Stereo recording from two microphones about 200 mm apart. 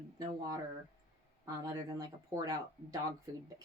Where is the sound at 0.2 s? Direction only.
15° right (ahead or behind).